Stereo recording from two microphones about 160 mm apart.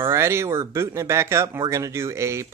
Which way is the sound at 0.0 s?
15° right (ahead or behind).